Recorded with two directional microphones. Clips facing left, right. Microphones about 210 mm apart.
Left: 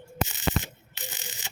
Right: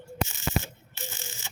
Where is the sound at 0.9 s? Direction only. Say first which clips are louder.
Right 1 dB; 15° left (ahead or behind).